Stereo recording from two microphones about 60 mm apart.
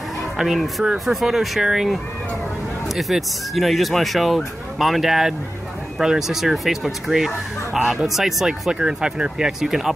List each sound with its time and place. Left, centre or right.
0.4 s speech: centre